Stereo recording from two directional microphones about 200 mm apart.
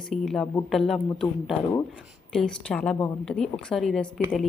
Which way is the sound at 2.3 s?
5° left (ahead or behind).